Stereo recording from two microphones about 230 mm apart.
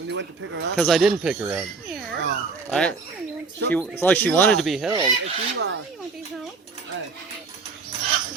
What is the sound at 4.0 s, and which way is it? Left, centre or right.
Speech, centre.